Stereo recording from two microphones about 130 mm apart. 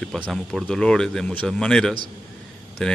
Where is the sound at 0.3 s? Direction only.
Centre (ahead or behind).